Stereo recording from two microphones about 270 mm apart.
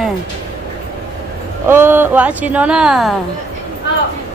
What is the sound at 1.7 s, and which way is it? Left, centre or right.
A woman's voice, centre.